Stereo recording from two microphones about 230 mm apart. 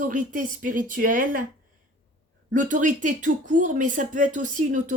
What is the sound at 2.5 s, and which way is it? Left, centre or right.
Speech, right.